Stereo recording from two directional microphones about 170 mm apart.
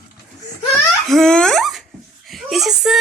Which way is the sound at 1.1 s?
5° left (ahead or behind).